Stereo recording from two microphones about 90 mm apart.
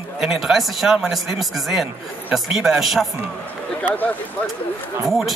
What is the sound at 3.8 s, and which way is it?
Speech, 20° left (ahead or behind).